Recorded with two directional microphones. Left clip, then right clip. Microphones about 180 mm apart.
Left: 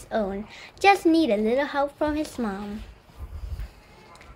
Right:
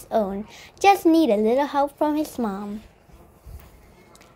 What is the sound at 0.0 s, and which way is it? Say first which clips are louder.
A woman's voice: right 4 dB; 25° right (ahead or behind).